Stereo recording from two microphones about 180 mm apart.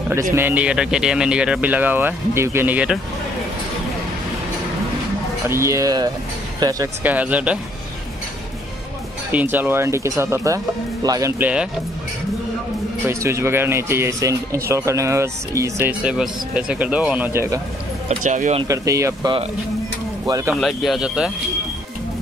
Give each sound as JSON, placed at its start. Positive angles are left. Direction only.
{"t": 0.1, "sound": "speech", "side_deg": -15}
{"t": 5.5, "sound": "speech", "side_deg": -15}
{"t": 7.1, "sound": "speech", "side_deg": -10}
{"t": 9.3, "sound": "speech", "side_deg": -10}
{"t": 13.1, "sound": "speech", "side_deg": -15}
{"t": 18.0, "sound": "speech", "side_deg": -45}
{"t": 18.6, "sound": "speech", "side_deg": -20}
{"t": 20.6, "sound": "speech", "side_deg": 0}